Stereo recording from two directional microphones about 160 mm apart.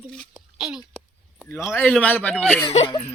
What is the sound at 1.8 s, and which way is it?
Speech, 10° left (ahead or behind).